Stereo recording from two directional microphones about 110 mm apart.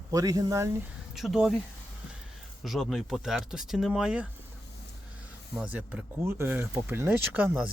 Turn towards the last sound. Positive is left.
turn(degrees=-15)  # may be behind; listen again after turning